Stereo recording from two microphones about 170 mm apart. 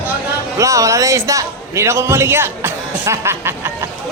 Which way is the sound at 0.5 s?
20° right (ahead or behind).